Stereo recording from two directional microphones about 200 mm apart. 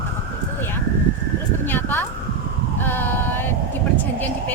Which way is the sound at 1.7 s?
10° left (ahead or behind).